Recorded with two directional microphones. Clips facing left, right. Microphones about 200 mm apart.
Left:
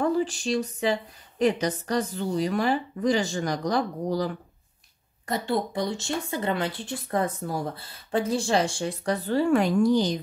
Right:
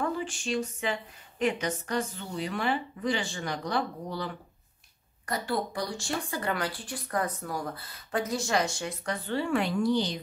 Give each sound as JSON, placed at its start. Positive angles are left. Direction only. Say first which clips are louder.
{"t": 0.0, "sound": "a sound", "louder": "left 7 dB", "side_deg": 35}
{"t": 1.4, "sound": "a woman's voice", "louder": "left 5 dB", "side_deg": 35}
{"t": 5.2, "sound": "speech", "louder": "left 4 dB", "side_deg": 25}